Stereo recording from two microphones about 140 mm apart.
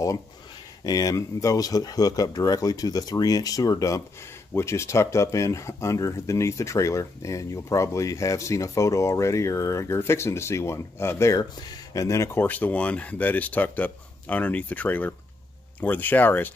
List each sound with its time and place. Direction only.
0.8 s speech: 25° left (ahead or behind)